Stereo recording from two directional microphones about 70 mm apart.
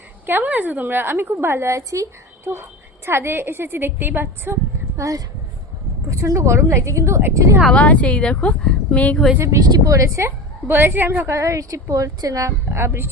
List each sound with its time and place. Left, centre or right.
0.3 s a woman's voice: right
3.1 s a woman's voice: right
4.9 s a woman's voice: right
7.7 s a woman's voice: centre
9.6 s a woman's voice: right
11.3 s a woman's voice: right
12.7 s a woman's voice: right